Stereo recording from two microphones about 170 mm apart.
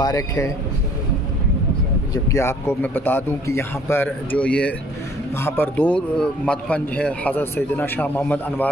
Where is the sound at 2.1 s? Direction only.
15° left (ahead or behind).